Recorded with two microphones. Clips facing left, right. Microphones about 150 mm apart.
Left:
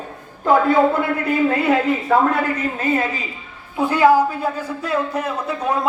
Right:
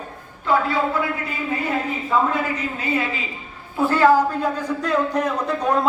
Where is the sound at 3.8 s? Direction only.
15° left (ahead or behind).